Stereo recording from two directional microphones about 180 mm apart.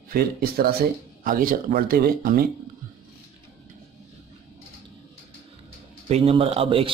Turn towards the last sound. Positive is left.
turn(degrees=-30)  # may be behind; listen again after turning